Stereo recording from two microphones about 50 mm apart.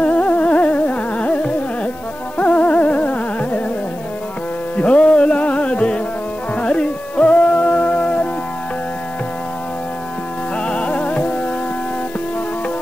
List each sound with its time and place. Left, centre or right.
0.0 s music: left
4.7 s music: left
10.6 s music: left